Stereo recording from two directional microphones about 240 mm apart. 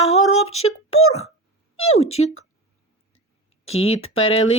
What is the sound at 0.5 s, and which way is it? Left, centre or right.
Speech, left.